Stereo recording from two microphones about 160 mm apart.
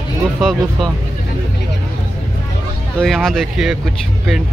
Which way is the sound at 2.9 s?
Centre (ahead or behind).